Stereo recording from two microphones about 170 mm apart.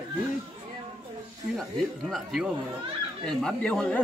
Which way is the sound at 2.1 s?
Centre (ahead or behind).